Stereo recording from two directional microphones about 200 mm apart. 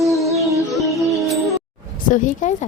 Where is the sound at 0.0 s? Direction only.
Centre (ahead or behind).